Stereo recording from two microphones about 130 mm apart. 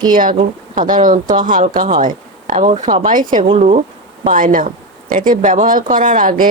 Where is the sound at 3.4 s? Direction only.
55° right (ahead or behind).